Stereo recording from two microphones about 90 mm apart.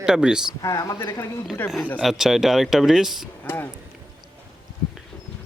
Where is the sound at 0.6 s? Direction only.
40° left (ahead or behind).